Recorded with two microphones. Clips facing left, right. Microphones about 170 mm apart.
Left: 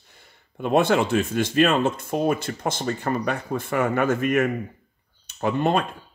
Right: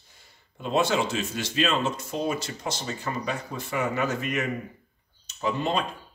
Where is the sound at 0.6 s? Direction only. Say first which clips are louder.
Left 5 dB; 55° left (ahead or behind).